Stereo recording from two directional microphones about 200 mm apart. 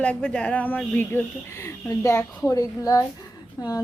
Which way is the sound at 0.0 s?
5° left (ahead or behind).